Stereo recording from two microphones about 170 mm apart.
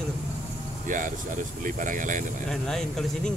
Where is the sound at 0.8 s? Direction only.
50° right (ahead or behind).